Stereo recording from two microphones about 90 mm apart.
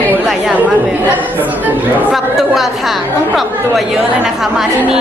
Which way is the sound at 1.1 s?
20° right (ahead or behind).